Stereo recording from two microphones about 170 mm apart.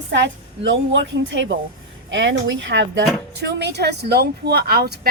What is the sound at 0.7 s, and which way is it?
Speech, 90° right.